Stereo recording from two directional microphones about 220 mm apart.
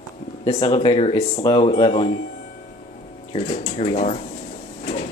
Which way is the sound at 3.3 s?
25° left (ahead or behind).